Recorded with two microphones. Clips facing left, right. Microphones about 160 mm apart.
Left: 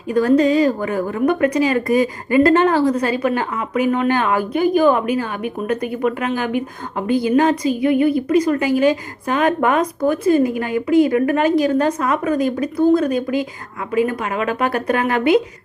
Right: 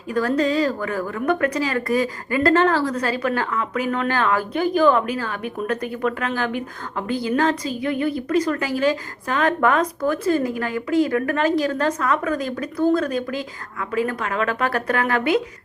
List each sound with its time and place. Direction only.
0.1 s a woman's voice: 20° left (ahead or behind)